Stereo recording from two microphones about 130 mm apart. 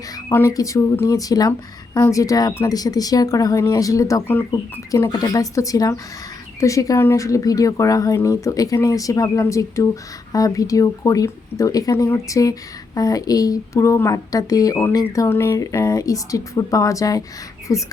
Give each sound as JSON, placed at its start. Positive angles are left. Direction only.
{"t": 0.3, "sound": "speech", "side_deg": 20}